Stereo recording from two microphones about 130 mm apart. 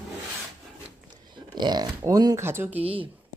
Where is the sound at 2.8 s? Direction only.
45° right (ahead or behind).